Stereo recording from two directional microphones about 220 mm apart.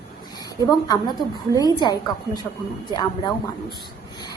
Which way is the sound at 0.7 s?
20° left (ahead or behind).